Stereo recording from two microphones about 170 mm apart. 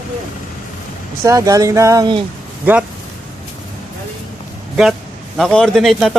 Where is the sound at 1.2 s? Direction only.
20° right (ahead or behind).